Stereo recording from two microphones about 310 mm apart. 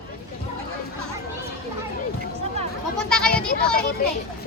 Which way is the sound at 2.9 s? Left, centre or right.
Centre.